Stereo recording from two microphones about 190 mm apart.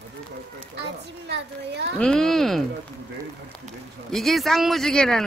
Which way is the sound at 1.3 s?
65° right (ahead or behind).